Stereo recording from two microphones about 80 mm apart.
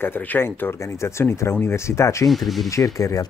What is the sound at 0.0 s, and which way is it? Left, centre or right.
Speech, left.